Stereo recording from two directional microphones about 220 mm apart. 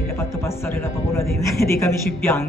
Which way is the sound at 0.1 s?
10° left (ahead or behind).